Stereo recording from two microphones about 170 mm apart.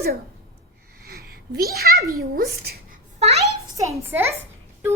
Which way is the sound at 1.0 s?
65° right (ahead or behind).